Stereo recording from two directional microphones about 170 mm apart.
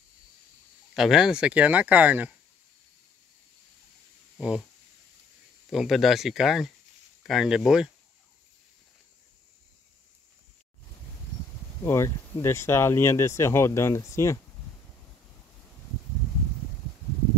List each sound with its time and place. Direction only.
0.9 s speech: centre (ahead or behind)
4.4 s speech: 5° right (ahead or behind)
5.7 s speech: centre (ahead or behind)
11.8 s speech: 15° left (ahead or behind)